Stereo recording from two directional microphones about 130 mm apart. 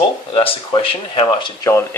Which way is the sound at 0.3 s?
40° left (ahead or behind).